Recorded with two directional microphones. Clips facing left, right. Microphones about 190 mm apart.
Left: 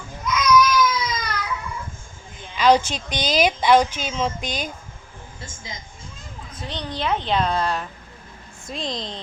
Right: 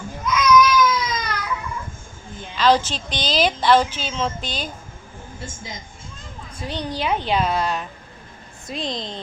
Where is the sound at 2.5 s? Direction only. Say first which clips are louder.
Left 1 dB; 10° left (ahead or behind).